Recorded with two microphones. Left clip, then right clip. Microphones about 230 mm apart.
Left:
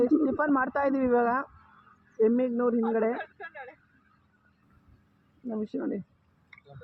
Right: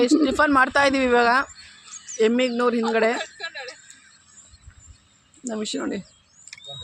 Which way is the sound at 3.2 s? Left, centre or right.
Centre.